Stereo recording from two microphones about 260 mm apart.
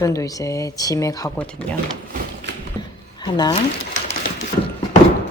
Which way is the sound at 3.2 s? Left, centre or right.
Centre.